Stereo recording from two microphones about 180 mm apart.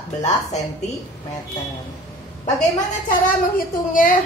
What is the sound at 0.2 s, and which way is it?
Speech, 40° left (ahead or behind).